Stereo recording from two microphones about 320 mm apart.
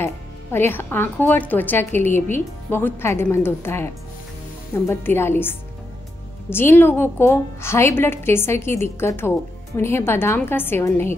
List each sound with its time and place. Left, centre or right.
0.0 s a woman's voice: centre